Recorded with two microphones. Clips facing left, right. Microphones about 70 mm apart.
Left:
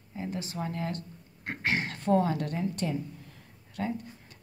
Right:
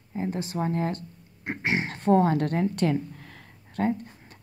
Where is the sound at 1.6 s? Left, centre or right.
Centre.